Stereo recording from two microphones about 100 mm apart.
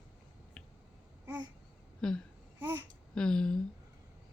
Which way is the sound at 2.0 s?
5° left (ahead or behind).